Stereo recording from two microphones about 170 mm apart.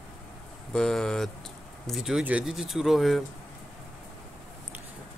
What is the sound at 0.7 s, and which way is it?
Speech, 5° left (ahead or behind).